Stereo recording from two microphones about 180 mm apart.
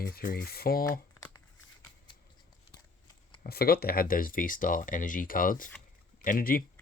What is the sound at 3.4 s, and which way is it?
Speech, 60° left (ahead or behind).